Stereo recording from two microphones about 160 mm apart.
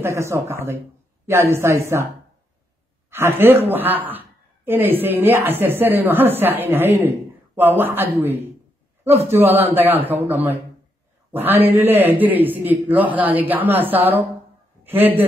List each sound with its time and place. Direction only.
0.0 s a woman's voice: 20° right (ahead or behind)
3.1 s a woman's voice: 15° right (ahead or behind)